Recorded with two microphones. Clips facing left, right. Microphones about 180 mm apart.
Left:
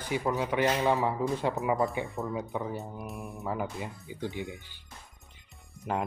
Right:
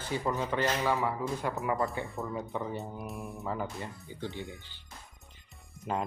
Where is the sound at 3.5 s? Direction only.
10° left (ahead or behind).